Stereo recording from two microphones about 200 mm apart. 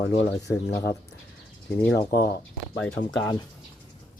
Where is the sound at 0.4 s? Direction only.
15° left (ahead or behind).